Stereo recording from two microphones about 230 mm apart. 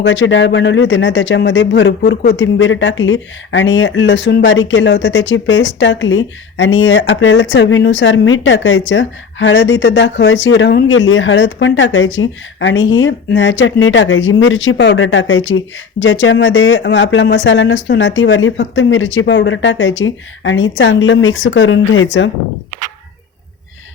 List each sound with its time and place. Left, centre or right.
0.0 s speech: left